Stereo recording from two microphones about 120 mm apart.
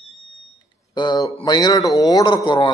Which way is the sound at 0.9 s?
35° left (ahead or behind).